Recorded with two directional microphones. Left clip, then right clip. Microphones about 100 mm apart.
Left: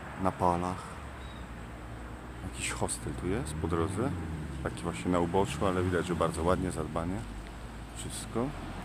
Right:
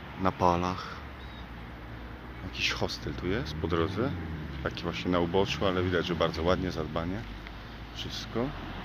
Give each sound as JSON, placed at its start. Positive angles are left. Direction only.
{"t": 0.2, "sound": "speech", "side_deg": -10}
{"t": 2.6, "sound": "speech", "side_deg": 5}
{"t": 8.4, "sound": "speech", "side_deg": 5}